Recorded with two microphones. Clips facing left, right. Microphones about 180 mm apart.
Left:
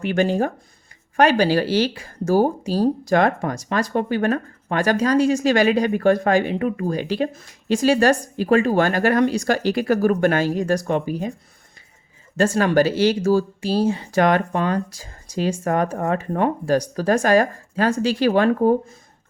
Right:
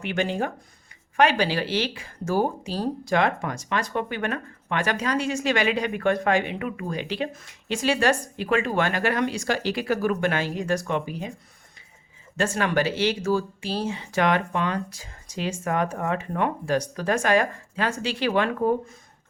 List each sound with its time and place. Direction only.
0.0 s speech: 40° left (ahead or behind)
12.4 s speech: 40° left (ahead or behind)